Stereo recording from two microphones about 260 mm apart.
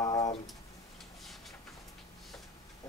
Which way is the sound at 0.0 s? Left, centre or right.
Centre.